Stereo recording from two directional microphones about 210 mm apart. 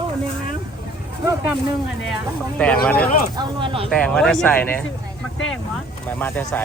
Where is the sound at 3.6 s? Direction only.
25° right (ahead or behind).